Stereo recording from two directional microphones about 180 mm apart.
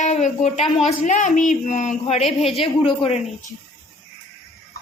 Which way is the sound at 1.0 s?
45° left (ahead or behind).